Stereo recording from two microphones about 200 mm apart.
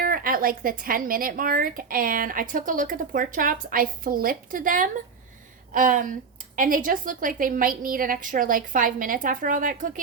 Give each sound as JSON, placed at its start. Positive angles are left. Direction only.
{"t": 0.0, "sound": "speech", "side_deg": -45}